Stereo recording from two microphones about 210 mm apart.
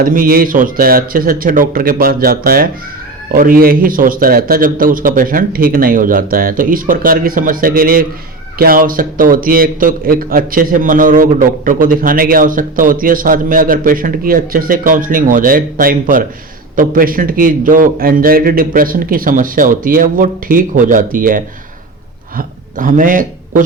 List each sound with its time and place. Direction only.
0.0 s a man's voice: 40° right (ahead or behind)